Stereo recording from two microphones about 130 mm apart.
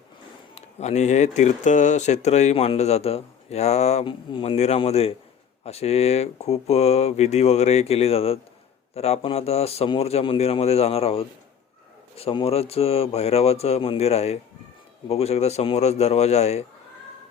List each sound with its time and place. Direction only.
0.5 s speech: 60° left (ahead or behind)
4.0 s speech: 40° left (ahead or behind)
4.5 s a man's voice: 55° left (ahead or behind)